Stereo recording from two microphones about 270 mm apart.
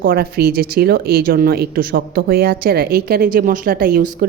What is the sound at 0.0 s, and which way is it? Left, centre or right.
A woman's voice, right.